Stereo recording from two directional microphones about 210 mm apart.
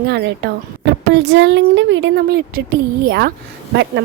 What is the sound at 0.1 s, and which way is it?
A woman's voice, 55° right (ahead or behind).